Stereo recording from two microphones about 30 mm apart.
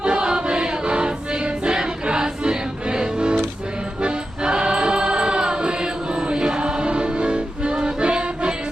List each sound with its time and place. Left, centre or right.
0.0 s music: right